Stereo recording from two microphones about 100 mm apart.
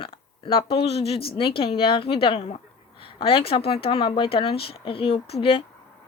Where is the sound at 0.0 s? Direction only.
60° left (ahead or behind).